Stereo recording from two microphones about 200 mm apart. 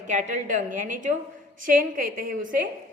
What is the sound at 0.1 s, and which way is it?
A woman's voice, 40° right (ahead or behind).